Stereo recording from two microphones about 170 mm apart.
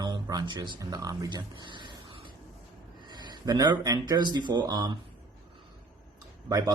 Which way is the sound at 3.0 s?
25° right (ahead or behind).